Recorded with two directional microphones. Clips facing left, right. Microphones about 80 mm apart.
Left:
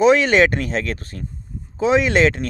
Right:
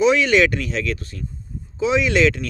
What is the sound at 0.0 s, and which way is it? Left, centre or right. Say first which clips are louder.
Speech: left 2 dB; left.